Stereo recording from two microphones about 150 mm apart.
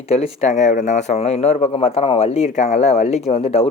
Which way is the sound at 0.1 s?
45° left (ahead or behind).